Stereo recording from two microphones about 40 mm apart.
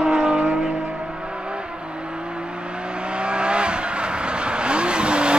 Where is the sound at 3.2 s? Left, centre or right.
Right.